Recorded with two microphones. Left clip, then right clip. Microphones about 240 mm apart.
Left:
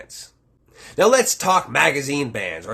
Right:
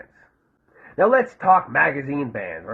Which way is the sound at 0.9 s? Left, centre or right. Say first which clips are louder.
Left 2 dB; left.